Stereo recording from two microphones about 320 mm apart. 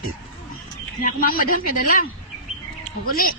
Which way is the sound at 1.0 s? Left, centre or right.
Left.